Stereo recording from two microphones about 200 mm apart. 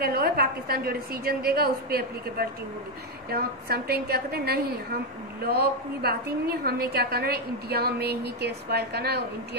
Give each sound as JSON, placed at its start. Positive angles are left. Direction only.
{"t": 0.0, "sound": "a woman's voice", "side_deg": -50}